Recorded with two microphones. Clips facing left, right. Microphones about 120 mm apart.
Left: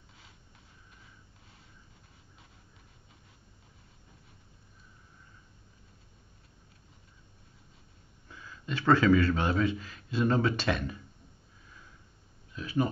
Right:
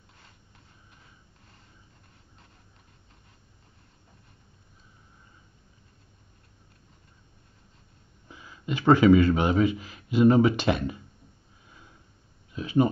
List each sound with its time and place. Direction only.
8.3 s speech: 15° right (ahead or behind)
12.5 s speech: 20° right (ahead or behind)